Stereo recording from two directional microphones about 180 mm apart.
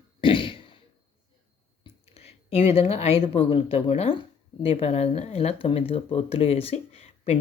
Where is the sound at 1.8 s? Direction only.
35° left (ahead or behind).